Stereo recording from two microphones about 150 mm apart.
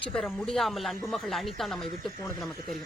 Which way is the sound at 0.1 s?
5° left (ahead or behind).